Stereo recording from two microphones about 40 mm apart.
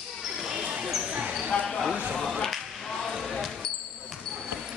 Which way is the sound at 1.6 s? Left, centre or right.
Centre.